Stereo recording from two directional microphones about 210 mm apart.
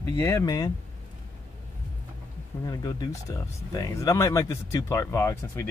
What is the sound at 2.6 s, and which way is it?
Speech, 20° left (ahead or behind).